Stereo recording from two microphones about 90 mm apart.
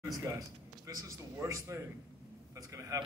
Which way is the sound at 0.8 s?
35° right (ahead or behind).